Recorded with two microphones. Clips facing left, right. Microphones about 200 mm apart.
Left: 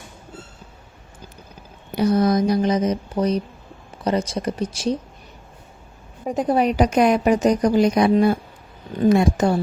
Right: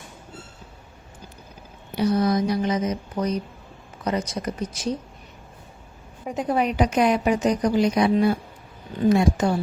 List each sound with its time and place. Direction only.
2.0 s speech: 45° left (ahead or behind); by 4.9 s 30° left (ahead or behind)
6.2 s a woman's voice: 35° left (ahead or behind)